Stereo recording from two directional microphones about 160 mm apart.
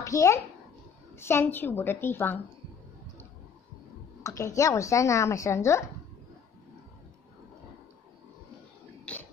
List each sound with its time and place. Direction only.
0.0 s a child's voice: 20° left (ahead or behind)
4.2 s speech: 20° left (ahead or behind)
9.1 s a sound: 10° left (ahead or behind)